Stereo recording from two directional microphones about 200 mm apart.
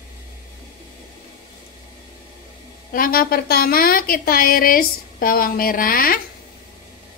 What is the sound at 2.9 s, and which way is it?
A woman's voice, 45° left (ahead or behind).